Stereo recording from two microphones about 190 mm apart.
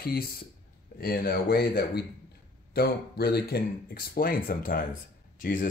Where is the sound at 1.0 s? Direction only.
50° left (ahead or behind).